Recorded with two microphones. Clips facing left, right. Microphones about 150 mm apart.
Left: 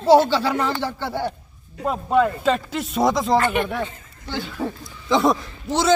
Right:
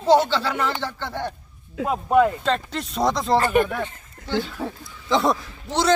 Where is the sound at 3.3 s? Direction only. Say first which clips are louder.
Right 1 dB; 40° right (ahead or behind).